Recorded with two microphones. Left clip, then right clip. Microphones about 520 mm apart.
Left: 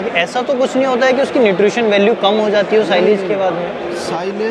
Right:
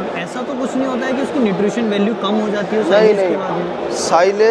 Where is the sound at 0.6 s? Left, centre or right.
Left.